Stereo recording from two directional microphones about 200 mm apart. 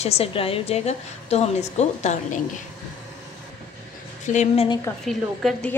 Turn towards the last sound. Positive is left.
turn(degrees=0)  # may be behind; listen again after turning